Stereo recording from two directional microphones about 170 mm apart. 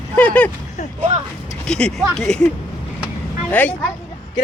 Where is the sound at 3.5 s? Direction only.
10° left (ahead or behind).